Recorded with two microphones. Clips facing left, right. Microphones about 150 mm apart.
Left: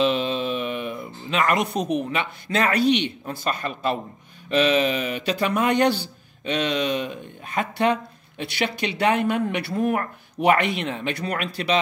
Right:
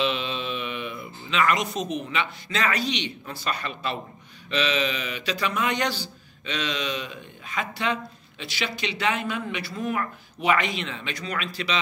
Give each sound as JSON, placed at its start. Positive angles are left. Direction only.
{"t": 0.0, "sound": "speech", "side_deg": 45}